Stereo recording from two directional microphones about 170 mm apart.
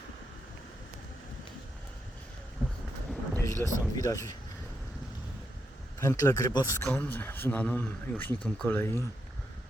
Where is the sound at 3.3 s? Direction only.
20° left (ahead or behind).